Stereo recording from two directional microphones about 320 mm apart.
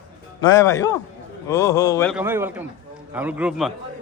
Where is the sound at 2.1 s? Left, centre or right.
Centre.